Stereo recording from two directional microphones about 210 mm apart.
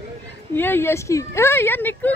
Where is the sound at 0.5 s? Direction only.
10° left (ahead or behind).